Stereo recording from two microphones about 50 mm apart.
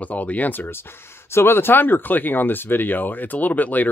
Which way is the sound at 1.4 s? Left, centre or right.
Left.